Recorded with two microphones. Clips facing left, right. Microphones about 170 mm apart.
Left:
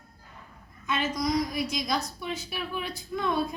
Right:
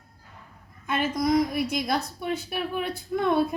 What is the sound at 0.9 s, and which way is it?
A woman's voice, 55° right (ahead or behind).